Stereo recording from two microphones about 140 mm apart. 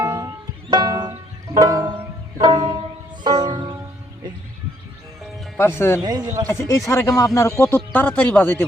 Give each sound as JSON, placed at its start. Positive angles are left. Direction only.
{"t": 0.0, "sound": "music", "side_deg": -25}
{"t": 5.2, "sound": "music", "side_deg": 0}
{"t": 5.5, "sound": "speech", "side_deg": 15}
{"t": 6.0, "sound": "speech", "side_deg": -30}
{"t": 6.5, "sound": "speech", "side_deg": 20}